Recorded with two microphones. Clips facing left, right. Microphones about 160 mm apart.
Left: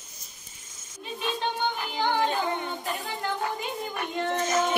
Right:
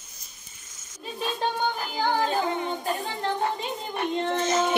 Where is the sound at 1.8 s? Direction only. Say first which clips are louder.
Left 1 dB; 40° right (ahead or behind).